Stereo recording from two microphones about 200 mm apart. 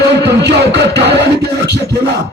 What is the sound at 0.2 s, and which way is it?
Music, 55° right (ahead or behind).